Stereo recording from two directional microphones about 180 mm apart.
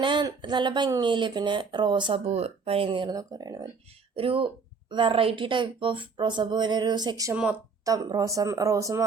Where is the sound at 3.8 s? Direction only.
30° right (ahead or behind).